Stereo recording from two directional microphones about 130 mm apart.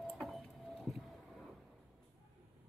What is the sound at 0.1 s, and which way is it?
Vehicle, centre (ahead or behind).